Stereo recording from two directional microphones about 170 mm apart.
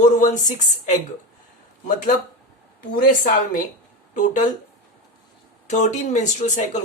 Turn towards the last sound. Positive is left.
turn(degrees=45)  # may be behind; listen again after turning